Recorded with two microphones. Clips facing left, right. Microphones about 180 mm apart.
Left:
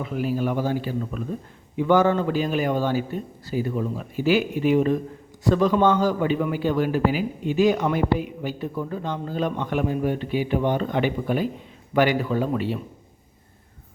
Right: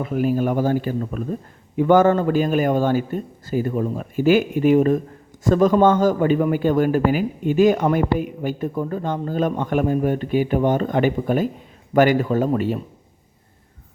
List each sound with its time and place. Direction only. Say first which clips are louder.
0.0 s a man's voice: right 5 dB; 50° right (ahead or behind)